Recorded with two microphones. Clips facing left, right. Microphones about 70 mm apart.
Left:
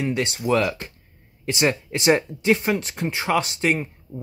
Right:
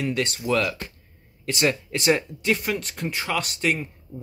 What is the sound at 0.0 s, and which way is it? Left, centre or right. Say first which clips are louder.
Speech: left 2 dB; centre.